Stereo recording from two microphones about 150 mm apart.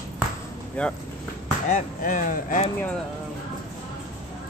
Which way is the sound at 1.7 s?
60° left (ahead or behind).